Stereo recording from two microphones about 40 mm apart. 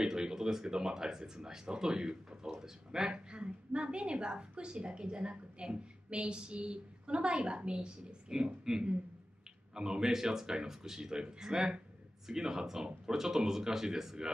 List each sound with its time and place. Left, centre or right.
0.0 s speech: centre